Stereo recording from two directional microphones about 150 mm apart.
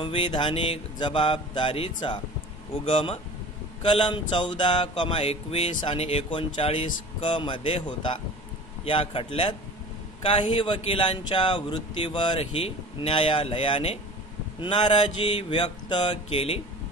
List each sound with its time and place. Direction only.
0.0 s speech: 35° left (ahead or behind)